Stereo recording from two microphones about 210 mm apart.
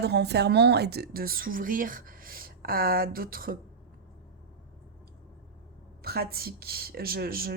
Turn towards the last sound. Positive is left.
turn(degrees=-45)  # may be behind; listen again after turning